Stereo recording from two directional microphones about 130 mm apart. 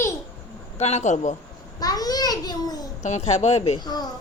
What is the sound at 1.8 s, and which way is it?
Babbling, 30° left (ahead or behind).